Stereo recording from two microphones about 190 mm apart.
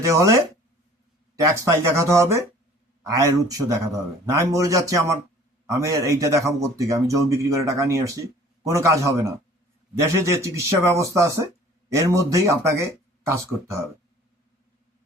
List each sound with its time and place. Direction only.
0.0 s speech: 15° right (ahead or behind)
1.4 s speech: 15° right (ahead or behind)